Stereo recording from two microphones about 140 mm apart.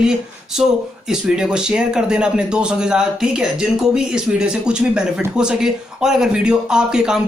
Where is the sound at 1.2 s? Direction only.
5° right (ahead or behind).